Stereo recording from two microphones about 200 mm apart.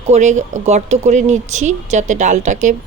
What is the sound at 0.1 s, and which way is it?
Speech, 35° right (ahead or behind).